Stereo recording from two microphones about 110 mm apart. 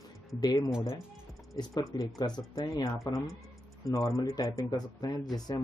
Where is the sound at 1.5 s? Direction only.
35° left (ahead or behind).